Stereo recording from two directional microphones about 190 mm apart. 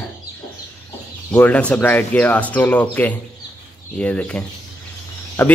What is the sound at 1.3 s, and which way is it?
Speech, 10° left (ahead or behind).